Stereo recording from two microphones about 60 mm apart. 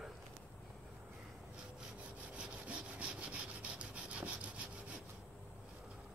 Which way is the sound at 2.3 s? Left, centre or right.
Centre.